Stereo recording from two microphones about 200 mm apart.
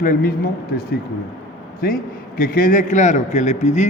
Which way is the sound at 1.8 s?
50° left (ahead or behind).